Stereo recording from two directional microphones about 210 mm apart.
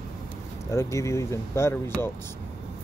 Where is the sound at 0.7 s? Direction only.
15° left (ahead or behind).